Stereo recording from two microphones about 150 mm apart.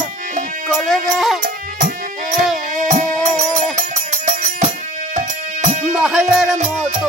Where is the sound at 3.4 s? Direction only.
50° right (ahead or behind).